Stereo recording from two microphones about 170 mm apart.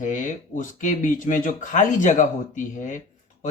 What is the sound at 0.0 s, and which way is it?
Speech, 50° left (ahead or behind).